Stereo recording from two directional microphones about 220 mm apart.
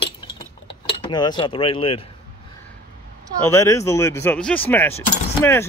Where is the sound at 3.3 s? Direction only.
10° left (ahead or behind).